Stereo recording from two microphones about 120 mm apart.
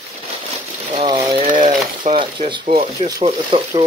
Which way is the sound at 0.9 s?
50° right (ahead or behind).